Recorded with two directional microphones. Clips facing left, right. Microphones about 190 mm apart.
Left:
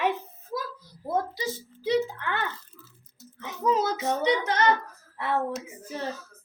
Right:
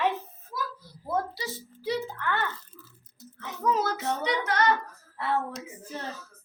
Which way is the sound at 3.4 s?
20° left (ahead or behind).